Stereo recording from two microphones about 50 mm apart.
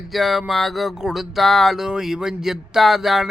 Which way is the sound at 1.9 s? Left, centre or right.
Centre.